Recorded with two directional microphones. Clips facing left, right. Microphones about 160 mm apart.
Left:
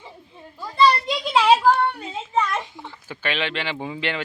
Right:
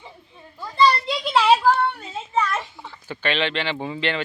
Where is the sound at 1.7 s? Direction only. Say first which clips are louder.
Left 1 dB; centre (ahead or behind).